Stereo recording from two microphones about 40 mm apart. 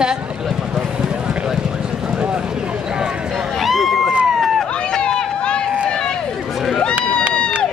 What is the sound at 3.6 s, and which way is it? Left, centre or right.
Run, centre.